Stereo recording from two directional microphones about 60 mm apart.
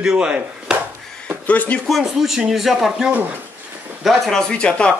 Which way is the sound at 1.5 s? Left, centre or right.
Left.